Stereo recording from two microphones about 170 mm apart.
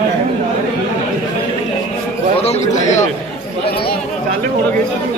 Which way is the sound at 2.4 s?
40° left (ahead or behind).